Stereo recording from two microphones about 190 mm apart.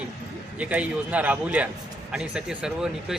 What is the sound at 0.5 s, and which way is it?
A man's voice, 5° right (ahead or behind).